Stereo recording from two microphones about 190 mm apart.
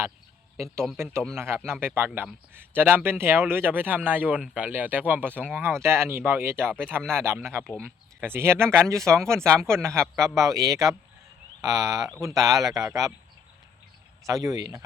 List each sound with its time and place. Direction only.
1.4 s speech: 10° right (ahead or behind)
7.0 s speech: 5° left (ahead or behind)
7.3 s speech: 15° right (ahead or behind)
14.3 s speech: 20° right (ahead or behind)